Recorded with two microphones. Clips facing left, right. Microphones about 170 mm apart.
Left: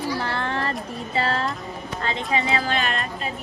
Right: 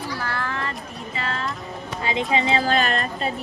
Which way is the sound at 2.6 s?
40° right (ahead or behind).